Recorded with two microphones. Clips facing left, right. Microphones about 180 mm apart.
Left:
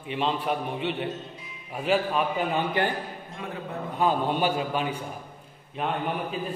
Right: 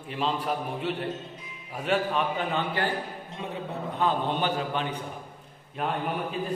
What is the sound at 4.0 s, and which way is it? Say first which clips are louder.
A man's voice: left 2 dB; 10° left (ahead or behind).